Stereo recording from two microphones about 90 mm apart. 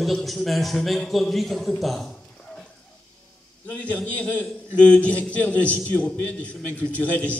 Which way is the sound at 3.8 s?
15° left (ahead or behind).